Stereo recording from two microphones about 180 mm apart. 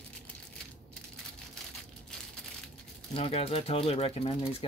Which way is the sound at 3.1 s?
30° left (ahead or behind).